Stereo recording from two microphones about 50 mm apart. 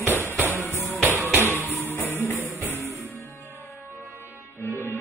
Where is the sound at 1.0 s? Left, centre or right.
Right.